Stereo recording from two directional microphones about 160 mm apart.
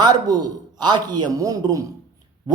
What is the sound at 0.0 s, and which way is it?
A man's voice, 25° right (ahead or behind).